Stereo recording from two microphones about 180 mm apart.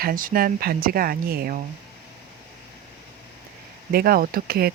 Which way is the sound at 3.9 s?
55° right (ahead or behind).